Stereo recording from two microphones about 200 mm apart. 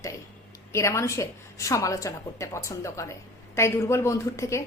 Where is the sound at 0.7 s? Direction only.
15° left (ahead or behind).